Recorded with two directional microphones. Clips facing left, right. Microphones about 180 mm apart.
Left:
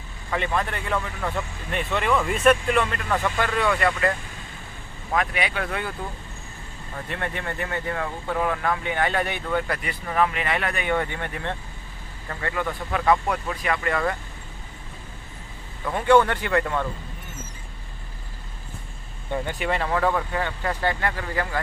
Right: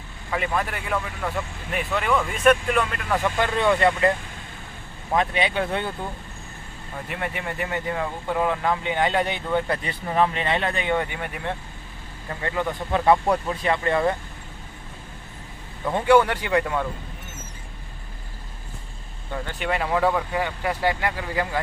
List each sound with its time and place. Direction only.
0.3 s speech: 5° right (ahead or behind)
3.2 s speech: 20° right (ahead or behind)
5.1 s speech: 25° right (ahead or behind)
7.1 s speech: 15° right (ahead or behind)
15.8 s speech: 20° right (ahead or behind)
19.5 s speech: centre (ahead or behind)